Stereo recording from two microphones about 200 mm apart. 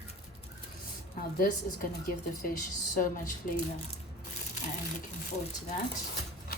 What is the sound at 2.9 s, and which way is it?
Speech, 40° left (ahead or behind).